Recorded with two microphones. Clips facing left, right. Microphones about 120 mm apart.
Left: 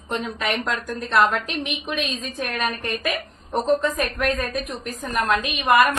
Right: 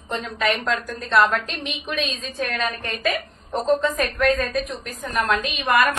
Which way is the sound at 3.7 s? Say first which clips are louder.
Right 1 dB; 5° left (ahead or behind).